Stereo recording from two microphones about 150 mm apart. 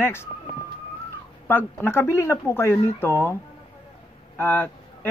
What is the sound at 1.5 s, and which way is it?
Speech, 15° left (ahead or behind).